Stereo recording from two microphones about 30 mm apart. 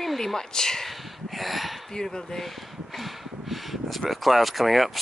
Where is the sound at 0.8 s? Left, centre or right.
Centre.